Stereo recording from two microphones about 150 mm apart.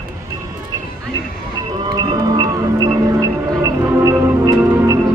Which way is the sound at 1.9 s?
25° right (ahead or behind).